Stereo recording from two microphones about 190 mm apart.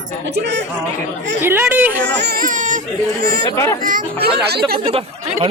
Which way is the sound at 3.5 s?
15° left (ahead or behind).